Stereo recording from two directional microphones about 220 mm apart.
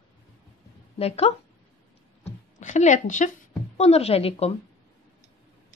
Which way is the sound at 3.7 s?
30° left (ahead or behind).